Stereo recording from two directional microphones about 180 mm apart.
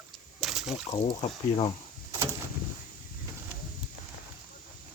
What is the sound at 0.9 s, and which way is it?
Speech, 30° left (ahead or behind).